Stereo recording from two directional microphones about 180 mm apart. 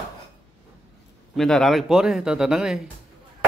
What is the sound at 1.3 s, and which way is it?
Speech, centre (ahead or behind).